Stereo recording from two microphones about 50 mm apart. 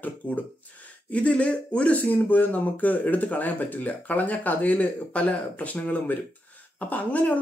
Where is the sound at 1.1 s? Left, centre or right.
Left.